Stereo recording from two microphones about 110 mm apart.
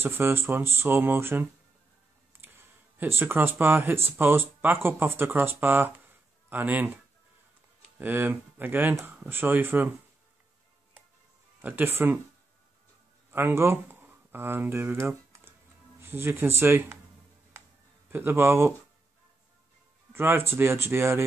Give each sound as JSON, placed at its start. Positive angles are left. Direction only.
{"t": 0.0, "sound": "speech", "side_deg": -20}
{"t": 8.0, "sound": "speech", "side_deg": -15}
{"t": 11.6, "sound": "speech", "side_deg": -20}
{"t": 13.3, "sound": "speech", "side_deg": -20}
{"t": 18.1, "sound": "speech", "side_deg": -20}
{"t": 20.1, "sound": "speech", "side_deg": -20}